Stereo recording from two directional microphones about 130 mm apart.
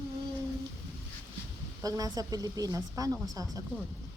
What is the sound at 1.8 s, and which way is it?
A woman's voice, 30° right (ahead or behind).